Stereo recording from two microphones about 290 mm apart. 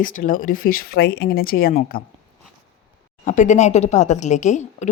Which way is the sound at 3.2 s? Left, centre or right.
Left.